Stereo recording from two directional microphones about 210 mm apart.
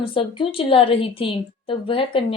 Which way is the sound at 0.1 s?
25° left (ahead or behind).